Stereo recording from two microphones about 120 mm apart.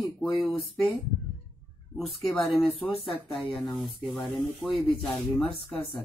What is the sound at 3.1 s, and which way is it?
Speech, centre (ahead or behind).